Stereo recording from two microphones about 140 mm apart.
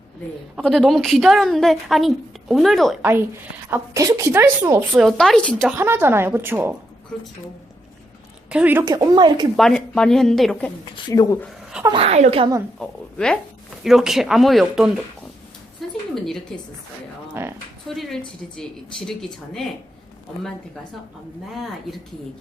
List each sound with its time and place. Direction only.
0.5 s a woman's voice: centre (ahead or behind)
3.0 s a woman's voice: 15° right (ahead or behind)
4.9 s a woman's voice: centre (ahead or behind)
5.7 s a woman's voice: 15° right (ahead or behind)
8.4 s a woman's voice: 10° right (ahead or behind)
8.8 s speech: 25° right (ahead or behind)
9.6 s a woman's voice: 5° left (ahead or behind)
10.9 s speech: 25° left (ahead or behind)
11.9 s speech: 50° right (ahead or behind)
12.8 s a woman's voice: 5° left (ahead or behind)
15.8 s a sound: centre (ahead or behind)
16.1 s a woman's voice: 5° left (ahead or behind)
17.4 s a woman's voice: 15° right (ahead or behind)
17.8 s a woman's voice: centre (ahead or behind)